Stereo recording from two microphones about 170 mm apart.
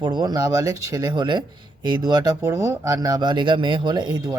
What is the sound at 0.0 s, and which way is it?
Speech, 25° right (ahead or behind).